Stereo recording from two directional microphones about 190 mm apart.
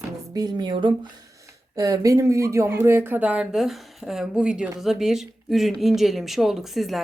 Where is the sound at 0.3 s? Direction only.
20° right (ahead or behind).